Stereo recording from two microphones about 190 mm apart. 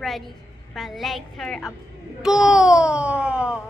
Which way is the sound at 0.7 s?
Centre (ahead or behind).